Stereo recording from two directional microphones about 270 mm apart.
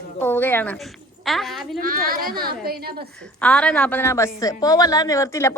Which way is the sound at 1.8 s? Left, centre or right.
Right.